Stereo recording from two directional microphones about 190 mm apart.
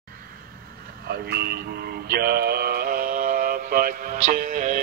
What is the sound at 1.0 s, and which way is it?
Speech, 60° right (ahead or behind).